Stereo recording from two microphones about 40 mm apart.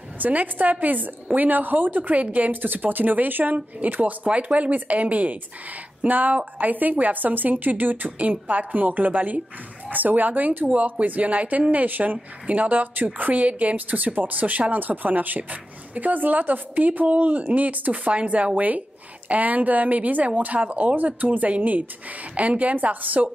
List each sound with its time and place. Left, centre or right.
0.2 s a woman's voice: right
2.6 s a woman's voice: right
3.5 s a woman's voice: right
18.1 s speech: right
18.5 s a woman's voice: right
20.8 s a woman's voice: right